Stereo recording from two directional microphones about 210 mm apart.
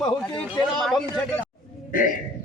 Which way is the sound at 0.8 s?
Centre (ahead or behind).